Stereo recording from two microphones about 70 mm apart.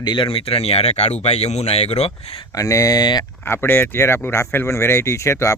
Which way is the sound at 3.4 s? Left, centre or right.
Left.